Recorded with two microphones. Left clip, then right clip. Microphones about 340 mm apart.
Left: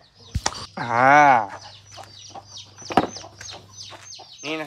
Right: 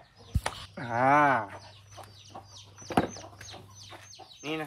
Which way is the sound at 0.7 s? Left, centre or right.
Centre.